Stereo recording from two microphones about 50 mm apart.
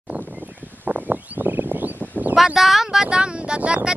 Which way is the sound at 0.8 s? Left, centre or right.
Right.